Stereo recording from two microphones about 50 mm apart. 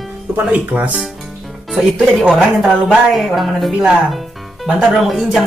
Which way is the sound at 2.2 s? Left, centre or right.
Centre.